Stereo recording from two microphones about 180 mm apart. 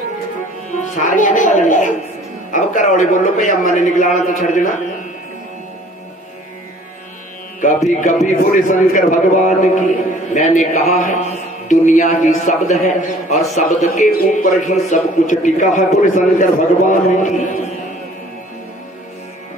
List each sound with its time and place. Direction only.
0.7 s a man's voice: 40° left (ahead or behind)
7.6 s a man's voice: 40° left (ahead or behind)